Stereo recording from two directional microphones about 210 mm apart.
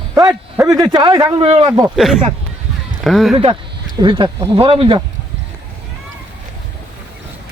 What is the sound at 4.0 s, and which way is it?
A man's voice, 20° right (ahead or behind).